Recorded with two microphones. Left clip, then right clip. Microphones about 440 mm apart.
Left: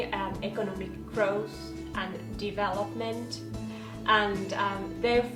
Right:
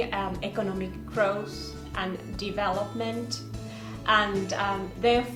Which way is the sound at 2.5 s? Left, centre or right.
Right.